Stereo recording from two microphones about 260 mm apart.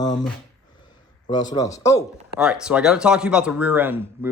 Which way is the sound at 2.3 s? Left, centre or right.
Centre.